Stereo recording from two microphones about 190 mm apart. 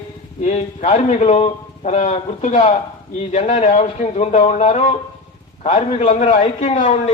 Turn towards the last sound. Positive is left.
turn(degrees=40)  # may be behind; listen again after turning